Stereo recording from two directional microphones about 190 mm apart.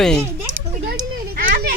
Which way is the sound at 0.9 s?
50° right (ahead or behind).